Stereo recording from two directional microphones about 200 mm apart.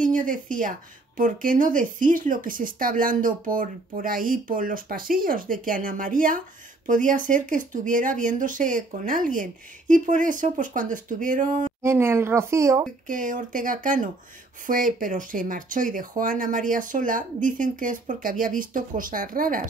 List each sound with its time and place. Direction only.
0.0 s speech: 40° right (ahead or behind)
11.8 s speech: 15° right (ahead or behind)
13.0 s speech: 40° right (ahead or behind)